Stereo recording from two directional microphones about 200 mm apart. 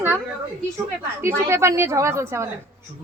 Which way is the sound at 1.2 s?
15° right (ahead or behind).